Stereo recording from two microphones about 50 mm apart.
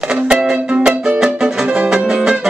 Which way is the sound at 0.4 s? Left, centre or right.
Centre.